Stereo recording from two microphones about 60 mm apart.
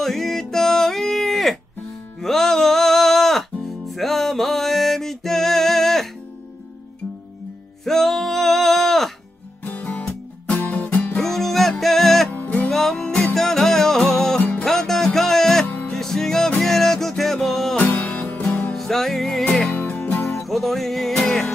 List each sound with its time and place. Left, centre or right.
0.0 s music: centre
7.8 s music: centre
9.7 s music: left
11.1 s music: centre
12.3 s music: left
12.6 s music: centre
17.7 s music: left
18.8 s music: centre
19.7 s music: left
20.4 s music: centre